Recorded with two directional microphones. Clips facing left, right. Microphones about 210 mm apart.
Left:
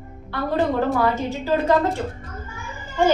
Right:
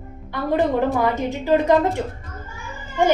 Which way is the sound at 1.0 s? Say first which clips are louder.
Right 1 dB; 15° right (ahead or behind).